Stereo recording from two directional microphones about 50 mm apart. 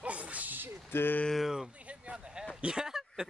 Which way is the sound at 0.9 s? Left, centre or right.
Left.